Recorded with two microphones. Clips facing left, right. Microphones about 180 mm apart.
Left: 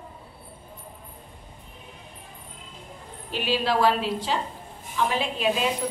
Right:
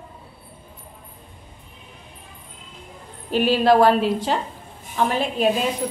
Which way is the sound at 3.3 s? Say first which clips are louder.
Right 9 dB; 50° right (ahead or behind).